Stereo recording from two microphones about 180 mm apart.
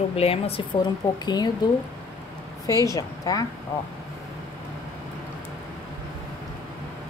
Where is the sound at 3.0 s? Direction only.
20° left (ahead or behind).